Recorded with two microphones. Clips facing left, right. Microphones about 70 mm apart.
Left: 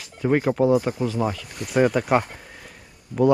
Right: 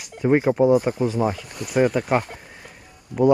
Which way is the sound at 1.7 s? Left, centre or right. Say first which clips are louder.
Even; centre.